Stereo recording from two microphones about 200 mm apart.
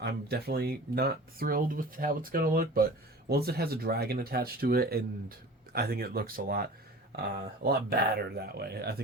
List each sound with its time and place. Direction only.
0.0 s speech: 55° right (ahead or behind)